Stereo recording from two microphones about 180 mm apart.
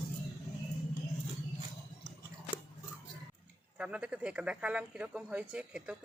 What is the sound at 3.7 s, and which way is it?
Speech, 5° right (ahead or behind).